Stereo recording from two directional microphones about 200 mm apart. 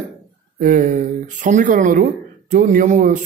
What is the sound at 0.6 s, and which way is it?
A man's voice, 40° right (ahead or behind).